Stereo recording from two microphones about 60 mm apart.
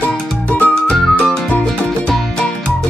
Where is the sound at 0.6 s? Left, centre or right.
Left.